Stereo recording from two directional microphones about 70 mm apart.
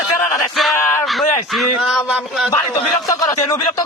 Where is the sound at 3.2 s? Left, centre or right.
Left.